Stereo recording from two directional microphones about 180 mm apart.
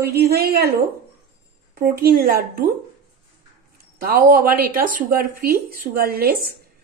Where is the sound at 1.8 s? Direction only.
55° right (ahead or behind).